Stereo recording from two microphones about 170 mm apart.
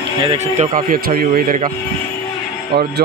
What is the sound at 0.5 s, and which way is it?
Speech, 55° right (ahead or behind).